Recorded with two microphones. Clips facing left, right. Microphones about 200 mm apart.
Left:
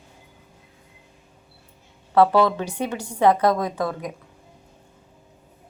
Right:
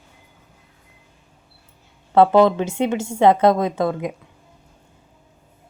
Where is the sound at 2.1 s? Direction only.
25° right (ahead or behind).